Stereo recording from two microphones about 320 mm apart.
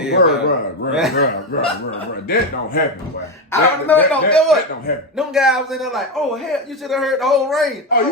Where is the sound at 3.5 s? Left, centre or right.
Centre.